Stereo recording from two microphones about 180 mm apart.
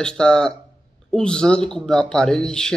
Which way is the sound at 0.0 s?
5° left (ahead or behind).